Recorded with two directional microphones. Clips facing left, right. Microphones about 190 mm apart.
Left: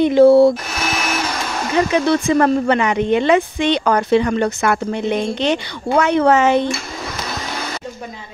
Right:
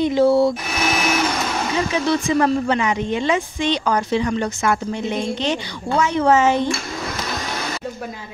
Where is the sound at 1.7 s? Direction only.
60° left (ahead or behind).